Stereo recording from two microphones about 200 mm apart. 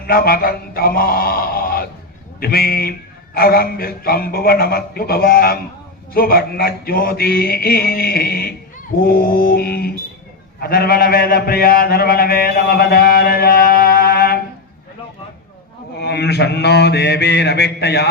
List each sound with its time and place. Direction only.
0.1 s mantra: 50° left (ahead or behind)
2.4 s a man's voice: 50° left (ahead or behind)
9.0 s mantra: 45° left (ahead or behind)
10.6 s a man's voice: 50° left (ahead or behind)
16.0 s mantra: 55° left (ahead or behind)